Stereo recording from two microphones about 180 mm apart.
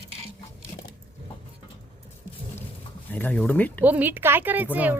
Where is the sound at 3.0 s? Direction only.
10° left (ahead or behind).